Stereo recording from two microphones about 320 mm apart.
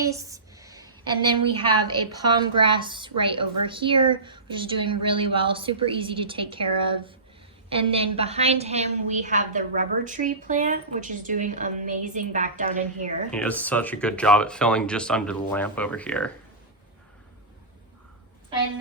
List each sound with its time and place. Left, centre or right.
0.0 s a sound: centre
2.1 s a woman's voice: centre
13.3 s speech: centre